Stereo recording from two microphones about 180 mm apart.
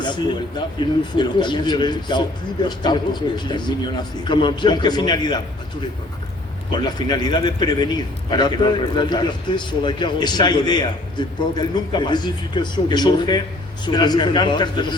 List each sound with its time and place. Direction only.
0.8 s a man's voice: 25° left (ahead or behind)
6.7 s a man's voice: 25° left (ahead or behind)